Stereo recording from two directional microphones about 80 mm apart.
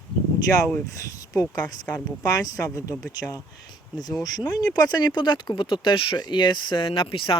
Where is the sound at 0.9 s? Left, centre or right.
Left.